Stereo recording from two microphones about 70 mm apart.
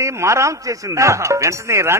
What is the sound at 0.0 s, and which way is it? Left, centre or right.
Speech, right.